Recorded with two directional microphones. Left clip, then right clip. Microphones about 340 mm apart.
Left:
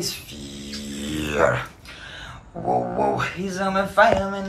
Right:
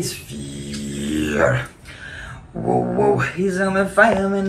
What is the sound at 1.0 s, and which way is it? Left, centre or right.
Music, centre.